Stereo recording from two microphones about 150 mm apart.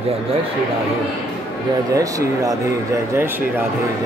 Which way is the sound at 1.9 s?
20° right (ahead or behind).